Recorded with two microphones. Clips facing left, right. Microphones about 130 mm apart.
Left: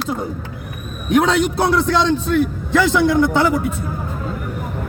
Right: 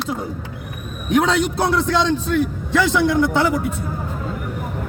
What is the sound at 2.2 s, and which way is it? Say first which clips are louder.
A man's voice: left 2 dB; 55° left (ahead or behind).